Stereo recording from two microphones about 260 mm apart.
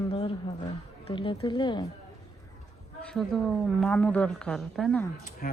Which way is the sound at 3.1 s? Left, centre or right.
Centre.